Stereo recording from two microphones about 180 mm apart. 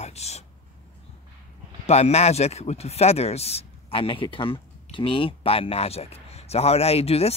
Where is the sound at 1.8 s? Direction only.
35° left (ahead or behind).